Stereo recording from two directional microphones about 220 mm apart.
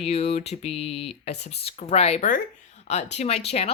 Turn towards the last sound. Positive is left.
turn(degrees=30)  # may be behind; listen again after turning